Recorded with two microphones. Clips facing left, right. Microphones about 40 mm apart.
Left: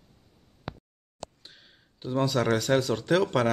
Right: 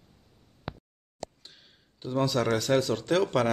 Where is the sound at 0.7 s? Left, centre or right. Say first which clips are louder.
Even; centre.